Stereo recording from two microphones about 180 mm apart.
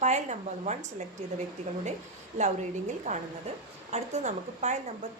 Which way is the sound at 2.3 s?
40° right (ahead or behind).